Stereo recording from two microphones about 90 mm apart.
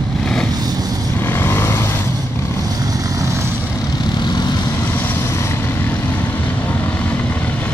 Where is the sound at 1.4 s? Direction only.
25° left (ahead or behind).